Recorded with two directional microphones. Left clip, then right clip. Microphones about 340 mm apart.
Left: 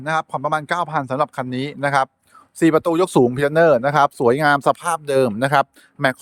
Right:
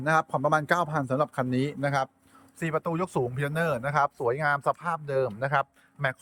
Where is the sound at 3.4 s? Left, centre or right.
Centre.